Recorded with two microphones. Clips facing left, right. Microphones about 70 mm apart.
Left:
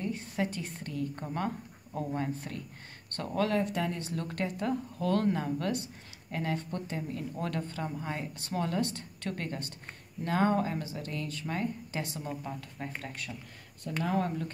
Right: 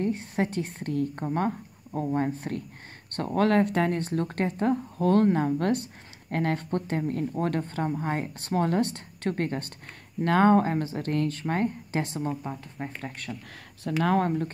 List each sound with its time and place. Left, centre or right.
0.0 s speech: right
1.1 s speech: right
3.3 s speech: right
12.3 s speech: right
14.0 s speech: right